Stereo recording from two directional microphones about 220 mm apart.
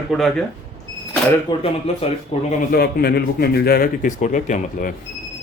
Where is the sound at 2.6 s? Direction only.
45° left (ahead or behind).